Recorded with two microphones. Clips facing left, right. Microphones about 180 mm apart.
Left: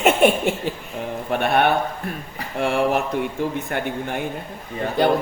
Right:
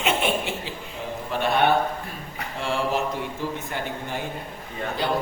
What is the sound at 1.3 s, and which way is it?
Speech, 60° left (ahead or behind).